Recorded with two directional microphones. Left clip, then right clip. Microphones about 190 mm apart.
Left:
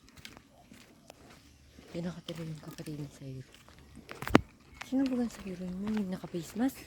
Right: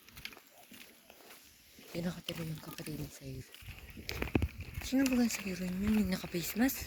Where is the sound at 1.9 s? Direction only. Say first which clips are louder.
Even; 45° left (ahead or behind).